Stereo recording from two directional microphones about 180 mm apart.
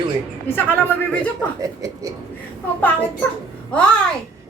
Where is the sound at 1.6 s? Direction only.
20° right (ahead or behind).